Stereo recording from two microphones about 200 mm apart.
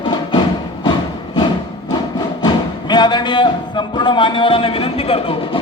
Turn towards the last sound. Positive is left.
turn(degrees=30)  # may be behind; listen again after turning